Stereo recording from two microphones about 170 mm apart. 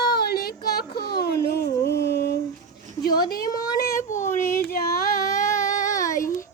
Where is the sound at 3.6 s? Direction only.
20° left (ahead or behind).